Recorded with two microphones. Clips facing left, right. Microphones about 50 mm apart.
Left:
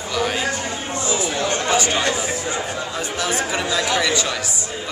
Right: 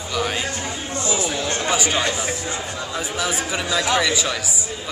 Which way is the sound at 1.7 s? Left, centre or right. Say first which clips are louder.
Left 1 dB; centre.